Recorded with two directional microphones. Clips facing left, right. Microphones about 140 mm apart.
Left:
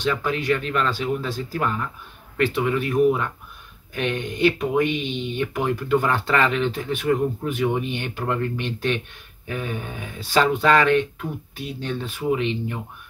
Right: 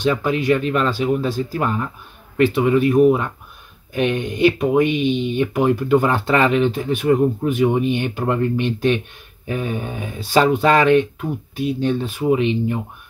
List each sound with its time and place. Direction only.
0.0 s speech: 15° right (ahead or behind)